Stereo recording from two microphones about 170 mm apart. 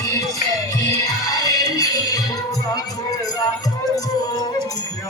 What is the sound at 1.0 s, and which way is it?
Music, 20° left (ahead or behind).